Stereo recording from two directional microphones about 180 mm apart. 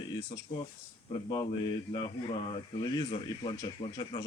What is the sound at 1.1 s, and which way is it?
Speech, 25° left (ahead or behind).